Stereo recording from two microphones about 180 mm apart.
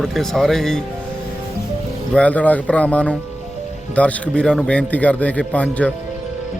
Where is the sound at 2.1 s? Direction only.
5° left (ahead or behind).